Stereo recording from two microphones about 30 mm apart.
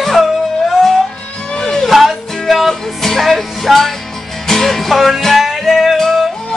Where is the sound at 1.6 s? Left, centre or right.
Centre.